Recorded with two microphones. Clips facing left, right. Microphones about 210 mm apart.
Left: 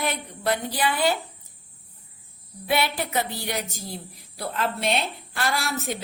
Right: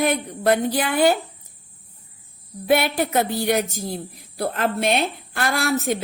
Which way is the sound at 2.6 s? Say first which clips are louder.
Right 6 dB; 50° right (ahead or behind).